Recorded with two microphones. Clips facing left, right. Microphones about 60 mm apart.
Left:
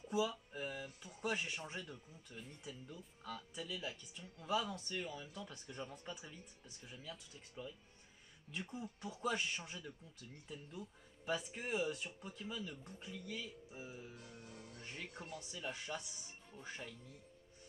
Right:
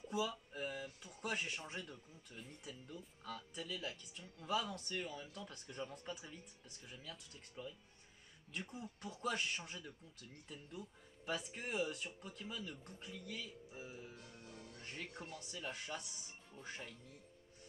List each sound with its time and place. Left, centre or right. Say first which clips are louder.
0.0 s a sound: left 2 dB; centre
0.8 s speech: left 2 dB; centre
14.1 s music: left 1 dB; centre
14.8 s music: right 1 dB; centre
15.3 s speech: left 2 dB; centre